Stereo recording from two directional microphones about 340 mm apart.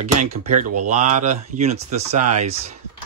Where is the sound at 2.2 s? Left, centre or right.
Right.